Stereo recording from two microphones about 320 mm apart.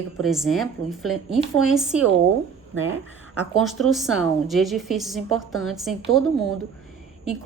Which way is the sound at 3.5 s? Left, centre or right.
Centre.